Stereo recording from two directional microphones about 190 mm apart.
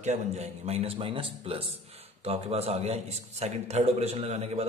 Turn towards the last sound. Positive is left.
turn(degrees=-35)  # may be behind; listen again after turning